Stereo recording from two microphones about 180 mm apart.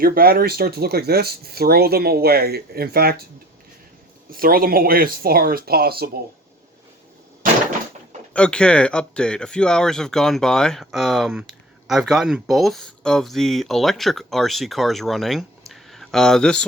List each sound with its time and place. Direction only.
0.0 s speech: 55° right (ahead or behind)
4.3 s speech: 55° right (ahead or behind)
8.3 s speech: 5° left (ahead or behind)
15.7 s a sound: centre (ahead or behind)